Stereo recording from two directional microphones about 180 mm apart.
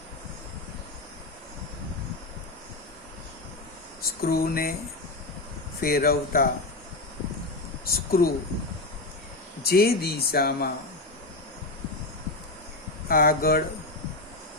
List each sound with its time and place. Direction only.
4.2 s speech: 60° left (ahead or behind)
5.8 s speech: 55° left (ahead or behind)
7.9 s speech: 55° left (ahead or behind)
9.6 s speech: 60° left (ahead or behind)
13.1 s speech: 55° left (ahead or behind)